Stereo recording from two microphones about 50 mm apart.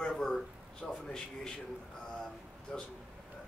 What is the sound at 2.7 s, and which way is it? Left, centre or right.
Speech, centre.